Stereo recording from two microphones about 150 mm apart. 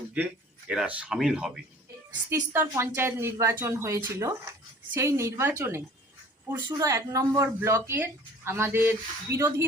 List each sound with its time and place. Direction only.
0.7 s speech: 5° right (ahead or behind)
2.3 s speech: 15° right (ahead or behind)